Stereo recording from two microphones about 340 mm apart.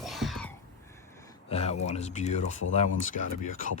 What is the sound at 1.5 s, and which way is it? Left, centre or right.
Speech, centre.